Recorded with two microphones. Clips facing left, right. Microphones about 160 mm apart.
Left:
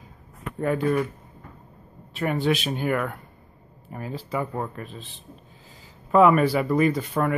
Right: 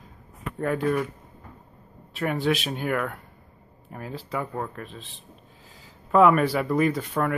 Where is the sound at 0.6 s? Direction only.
Centre (ahead or behind).